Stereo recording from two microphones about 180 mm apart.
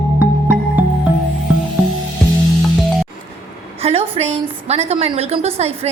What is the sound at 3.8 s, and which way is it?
A woman's voice, 35° right (ahead or behind).